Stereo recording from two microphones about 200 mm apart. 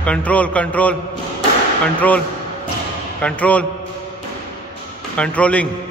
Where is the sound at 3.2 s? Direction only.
5° left (ahead or behind).